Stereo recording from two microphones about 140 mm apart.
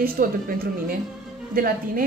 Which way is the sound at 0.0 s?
90° right.